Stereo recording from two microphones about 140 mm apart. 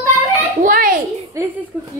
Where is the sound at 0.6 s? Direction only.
85° right.